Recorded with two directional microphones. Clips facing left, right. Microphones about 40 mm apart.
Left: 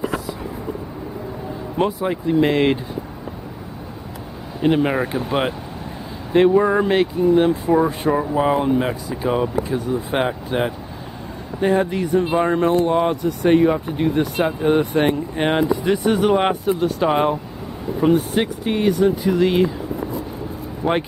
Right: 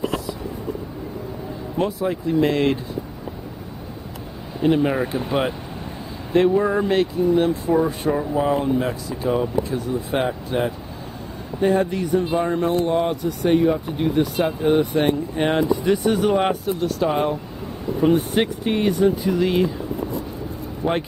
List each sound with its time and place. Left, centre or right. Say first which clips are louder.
1.8 s speech: left 2 dB; centre
4.6 s speech: left 1 dB; left
6.3 s speech: left 3 dB; centre
12.6 s speech: left 3 dB; centre; by 17.4 s left
18.1 s speech: left 1 dB; centre
20.8 s speech: left 2 dB; centre